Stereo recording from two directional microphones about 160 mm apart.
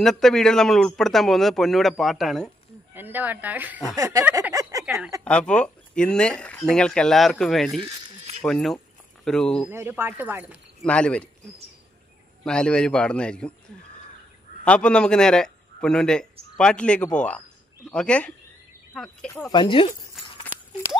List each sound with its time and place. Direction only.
0.0 s speech: 5° left (ahead or behind)
2.9 s speech: 10° right (ahead or behind)
3.9 s a sound: 20° right (ahead or behind)
4.8 s speech: 5° right (ahead or behind)
5.2 s speech: 5° left (ahead or behind)
9.7 s speech: 15° right (ahead or behind)
10.8 s speech: 5° left (ahead or behind)
12.4 s speech: 5° left (ahead or behind)
14.6 s a man's voice: 5° left (ahead or behind)
19.5 s speech: 30° left (ahead or behind)